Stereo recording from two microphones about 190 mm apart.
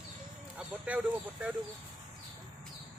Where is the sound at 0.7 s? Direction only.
10° right (ahead or behind).